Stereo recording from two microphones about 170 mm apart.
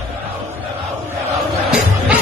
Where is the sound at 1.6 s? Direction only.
5° right (ahead or behind).